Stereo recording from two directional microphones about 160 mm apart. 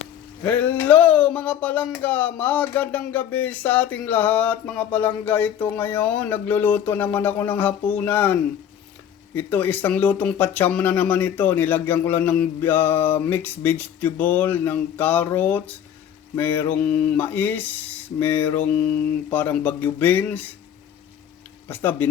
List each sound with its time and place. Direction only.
0.4 s speech: 10° left (ahead or behind)
21.7 s speech: 10° left (ahead or behind)